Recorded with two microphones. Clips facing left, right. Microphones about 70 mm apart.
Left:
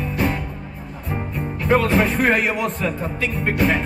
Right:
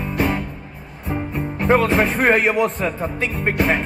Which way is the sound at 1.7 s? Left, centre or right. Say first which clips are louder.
Right 1 dB; right.